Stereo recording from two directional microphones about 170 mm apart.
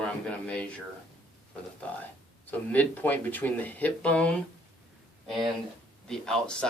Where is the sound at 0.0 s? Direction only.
5° left (ahead or behind).